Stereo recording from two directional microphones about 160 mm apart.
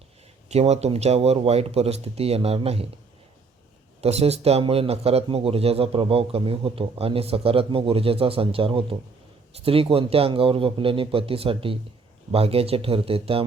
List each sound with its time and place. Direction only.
0.4 s a man's voice: 40° right (ahead or behind)
4.0 s a man's voice: 40° right (ahead or behind)